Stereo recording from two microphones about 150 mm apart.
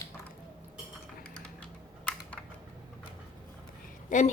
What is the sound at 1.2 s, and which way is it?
Cutlery, 5° left (ahead or behind).